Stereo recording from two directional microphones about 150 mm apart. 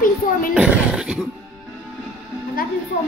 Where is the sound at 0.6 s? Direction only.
5° right (ahead or behind).